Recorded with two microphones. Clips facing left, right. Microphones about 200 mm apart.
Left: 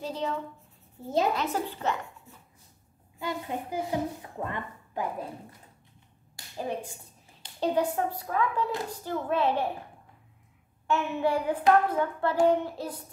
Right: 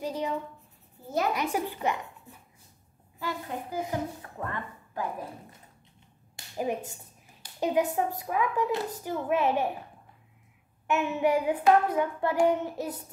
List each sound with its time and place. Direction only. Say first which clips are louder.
0.0 s speech: right 1 dB; 15° right (ahead or behind)
1.3 s hands: right 1 dB; 15° right (ahead or behind)
3.2 s a child's voice: left 1 dB; 20° left (ahead or behind)
6.3 s finger snapping: right 3 dB; 15° right (ahead or behind)
7.6 s hands: even; 15° right (ahead or behind)
10.9 s hands: right 1 dB; 15° right (ahead or behind)
12.4 s child singing: left 1 dB; 20° right (ahead or behind)